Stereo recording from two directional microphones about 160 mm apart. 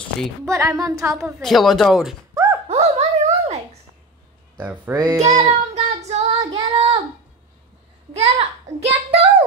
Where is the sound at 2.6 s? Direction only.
40° right (ahead or behind).